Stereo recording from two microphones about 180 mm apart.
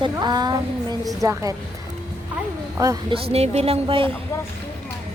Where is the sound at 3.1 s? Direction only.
35° right (ahead or behind).